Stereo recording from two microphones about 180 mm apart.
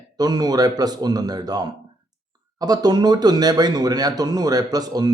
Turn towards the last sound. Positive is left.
turn(degrees=-20)  # may be behind; listen again after turning